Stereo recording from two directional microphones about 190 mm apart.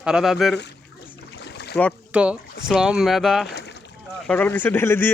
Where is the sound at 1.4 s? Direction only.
60° left (ahead or behind).